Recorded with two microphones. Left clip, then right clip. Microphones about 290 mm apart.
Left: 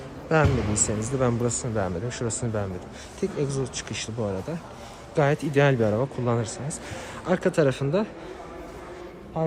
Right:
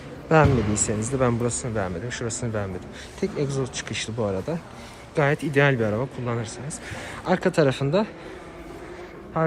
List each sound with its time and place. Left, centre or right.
0.7 s speech: left
1.0 s speech: centre
9.4 s speech: centre